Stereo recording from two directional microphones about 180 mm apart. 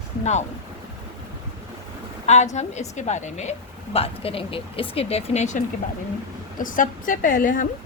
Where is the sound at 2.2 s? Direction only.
40° left (ahead or behind).